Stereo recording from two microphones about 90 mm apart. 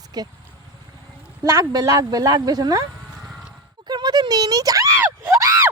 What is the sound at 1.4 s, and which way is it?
Speech, 40° right (ahead or behind).